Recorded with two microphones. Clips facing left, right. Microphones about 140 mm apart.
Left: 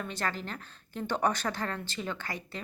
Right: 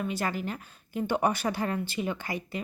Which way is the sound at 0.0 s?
10° right (ahead or behind).